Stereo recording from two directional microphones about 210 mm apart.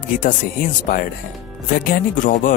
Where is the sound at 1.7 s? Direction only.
40° left (ahead or behind).